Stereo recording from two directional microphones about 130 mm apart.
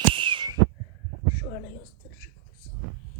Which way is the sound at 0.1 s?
40° right (ahead or behind).